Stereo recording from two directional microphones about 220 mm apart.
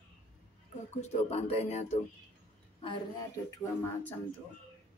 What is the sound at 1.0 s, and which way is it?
Speech, 30° left (ahead or behind).